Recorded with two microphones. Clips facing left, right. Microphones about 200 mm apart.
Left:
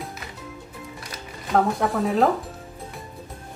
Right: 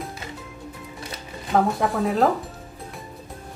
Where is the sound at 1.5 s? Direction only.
Centre (ahead or behind).